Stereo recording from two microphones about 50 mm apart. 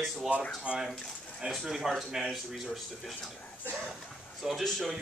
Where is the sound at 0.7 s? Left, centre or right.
Centre.